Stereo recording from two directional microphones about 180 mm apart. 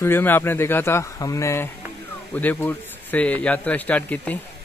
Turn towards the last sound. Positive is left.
turn(degrees=5)  # may be behind; listen again after turning